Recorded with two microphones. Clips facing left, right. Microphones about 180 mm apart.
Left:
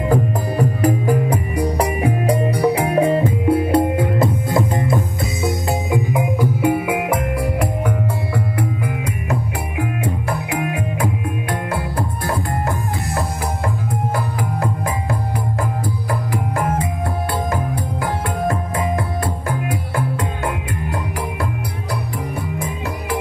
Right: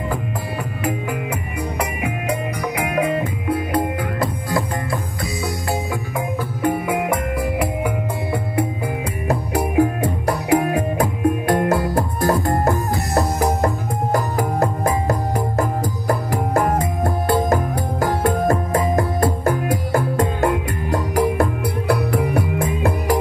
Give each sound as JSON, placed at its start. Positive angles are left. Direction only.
{"t": 0.1, "sound": "music", "side_deg": 40}
{"t": 9.3, "sound": "music", "side_deg": -40}
{"t": 18.2, "sound": "music", "side_deg": -40}
{"t": 22.1, "sound": "music", "side_deg": -65}